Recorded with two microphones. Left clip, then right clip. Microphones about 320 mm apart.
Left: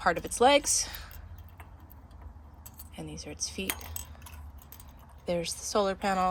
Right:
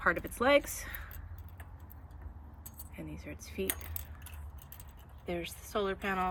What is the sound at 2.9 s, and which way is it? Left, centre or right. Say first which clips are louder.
Speech: left 4 dB; centre.